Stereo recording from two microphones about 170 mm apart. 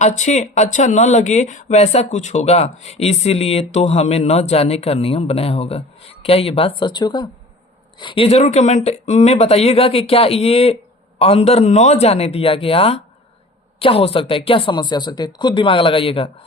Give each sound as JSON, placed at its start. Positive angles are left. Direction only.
{"t": 0.0, "sound": "speech", "side_deg": 45}